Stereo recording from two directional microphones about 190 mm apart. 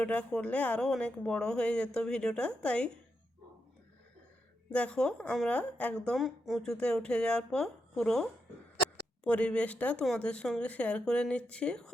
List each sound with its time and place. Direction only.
0.0 s a woman's voice: 5° left (ahead or behind)
4.7 s a woman's voice: 5° left (ahead or behind)